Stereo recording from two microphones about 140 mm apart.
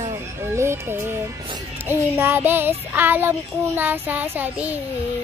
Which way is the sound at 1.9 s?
15° right (ahead or behind).